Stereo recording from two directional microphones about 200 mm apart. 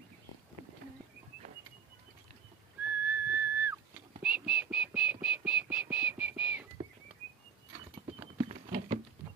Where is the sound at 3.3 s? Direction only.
10° right (ahead or behind).